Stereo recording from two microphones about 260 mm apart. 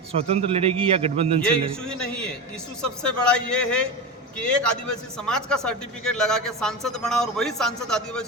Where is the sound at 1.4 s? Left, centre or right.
Centre.